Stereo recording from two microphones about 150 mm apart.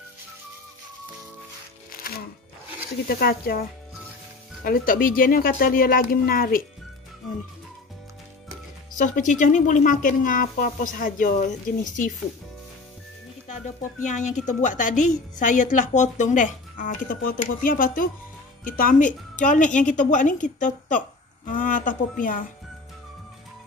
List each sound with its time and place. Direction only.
1.9 s music: 80° left
3.1 s speech: 85° left
4.6 s speech: 75° left (ahead or behind)
8.9 s a woman's voice: 60° left (ahead or behind)
14.0 s a woman's voice: 55° left (ahead or behind)